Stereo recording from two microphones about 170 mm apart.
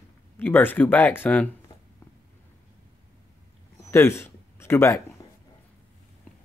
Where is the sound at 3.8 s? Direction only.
15° left (ahead or behind).